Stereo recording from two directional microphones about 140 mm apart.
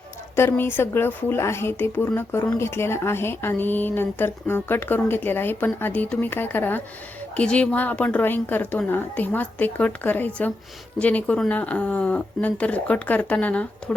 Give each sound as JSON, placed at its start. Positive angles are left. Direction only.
{"t": 0.3, "sound": "speech", "side_deg": 15}